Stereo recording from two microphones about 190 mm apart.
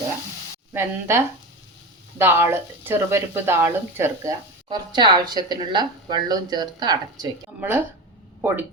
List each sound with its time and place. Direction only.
0.7 s speech: 15° right (ahead or behind)
7.6 s speech: 10° right (ahead or behind)